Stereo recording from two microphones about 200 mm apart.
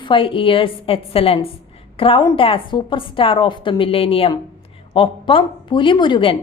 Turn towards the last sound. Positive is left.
turn(degrees=25)  # may be behind; listen again after turning